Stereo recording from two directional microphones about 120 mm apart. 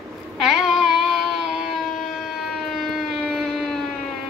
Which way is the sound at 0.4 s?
Centre (ahead or behind).